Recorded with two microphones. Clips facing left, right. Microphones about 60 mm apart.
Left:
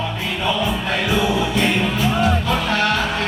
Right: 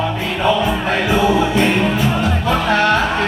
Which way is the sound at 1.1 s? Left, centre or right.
Right.